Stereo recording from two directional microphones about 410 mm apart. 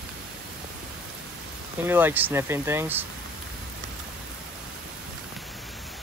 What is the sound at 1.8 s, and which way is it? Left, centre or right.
Speech, centre.